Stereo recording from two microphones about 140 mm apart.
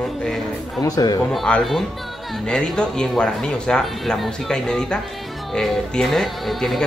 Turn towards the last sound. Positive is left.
turn(degrees=0)  # may be behind; listen again after turning